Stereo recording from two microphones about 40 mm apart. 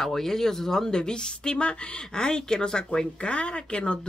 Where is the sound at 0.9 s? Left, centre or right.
Left.